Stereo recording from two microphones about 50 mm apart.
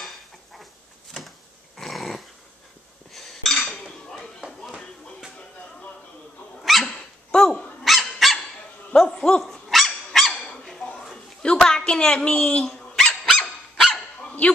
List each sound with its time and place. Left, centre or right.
0.0 s dishes: centre
1.8 s dog: centre
3.1 s dishes: centre
6.6 s dog: centre
7.2 s dog: centre
7.8 s dog: centre
8.9 s dog: centre
9.5 s dog: centre
11.6 s a sound: centre
13.0 s dog: centre